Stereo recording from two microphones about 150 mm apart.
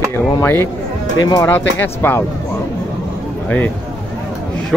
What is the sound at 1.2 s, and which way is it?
Speech, 25° left (ahead or behind).